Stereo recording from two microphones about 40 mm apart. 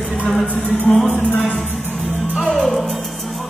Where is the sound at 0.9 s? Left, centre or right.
Left.